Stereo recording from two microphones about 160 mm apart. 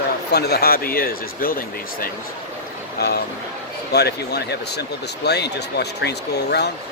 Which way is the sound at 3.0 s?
85° left.